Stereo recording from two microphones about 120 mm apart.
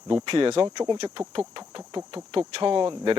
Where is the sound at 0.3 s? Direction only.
50° right (ahead or behind).